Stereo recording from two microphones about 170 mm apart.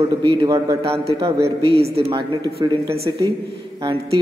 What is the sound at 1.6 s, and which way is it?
Speech, 35° right (ahead or behind).